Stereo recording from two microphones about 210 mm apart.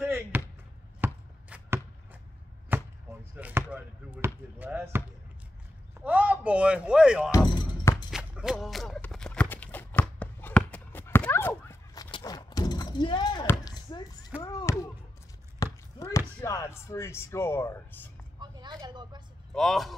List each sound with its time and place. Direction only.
0.0 s basketball bounce: 10° right (ahead or behind)
1.0 s chopping: 10° right (ahead or behind)
2.7 s chop: 10° right (ahead or behind)
3.3 s basketball bounce: 5° right (ahead or behind)
5.9 s a sound: 5° right (ahead or behind)
7.2 s music: 20° left (ahead or behind)
7.9 s a sound: 5° right (ahead or behind); by 14.9 s 15° left (ahead or behind)
15.6 s chop: 15° left (ahead or behind)
18.4 s vehicle: 20° right (ahead or behind)
19.5 s a man's voice: centre (ahead or behind)